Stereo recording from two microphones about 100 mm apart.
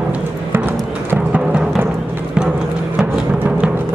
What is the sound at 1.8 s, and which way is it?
Music, 20° right (ahead or behind).